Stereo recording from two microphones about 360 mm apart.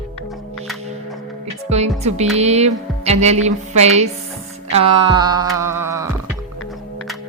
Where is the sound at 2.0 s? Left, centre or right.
Centre.